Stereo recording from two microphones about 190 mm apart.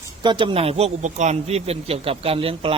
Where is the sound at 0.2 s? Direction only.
25° right (ahead or behind).